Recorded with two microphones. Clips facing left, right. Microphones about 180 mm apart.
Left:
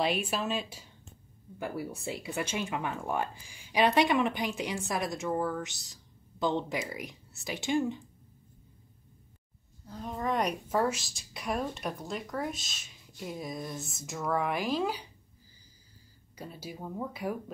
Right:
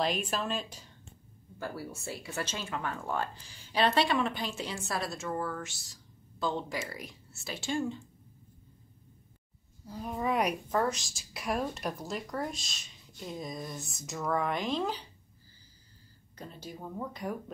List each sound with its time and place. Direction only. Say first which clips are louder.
0.0 s speech: left 1 dB; 5° left (ahead or behind)
9.8 s speech: right 1 dB; 10° right (ahead or behind)
10.7 s a woman's voice: left 1 dB; 10° left (ahead or behind)
16.3 s speech: left 2 dB; 10° left (ahead or behind)